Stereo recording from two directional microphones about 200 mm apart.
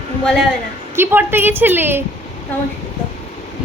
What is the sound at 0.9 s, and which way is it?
A woman's voice, 10° right (ahead or behind).